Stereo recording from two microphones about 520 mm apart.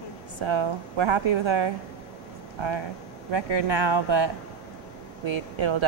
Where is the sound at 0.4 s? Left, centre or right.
Right.